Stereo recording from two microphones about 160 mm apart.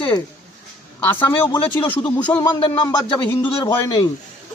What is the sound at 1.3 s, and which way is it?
Speech, 25° left (ahead or behind).